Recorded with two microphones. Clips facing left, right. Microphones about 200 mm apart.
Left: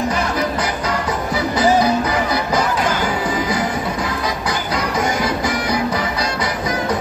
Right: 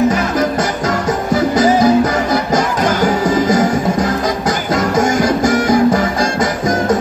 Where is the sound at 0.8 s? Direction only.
45° right (ahead or behind).